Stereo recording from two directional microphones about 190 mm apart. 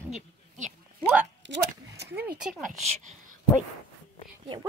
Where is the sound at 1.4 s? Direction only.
70° right (ahead or behind).